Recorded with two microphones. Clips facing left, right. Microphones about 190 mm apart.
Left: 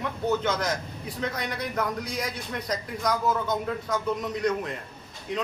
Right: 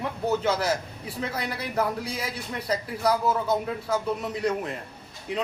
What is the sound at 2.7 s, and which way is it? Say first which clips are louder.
Speech: right 4 dB; 30° right (ahead or behind).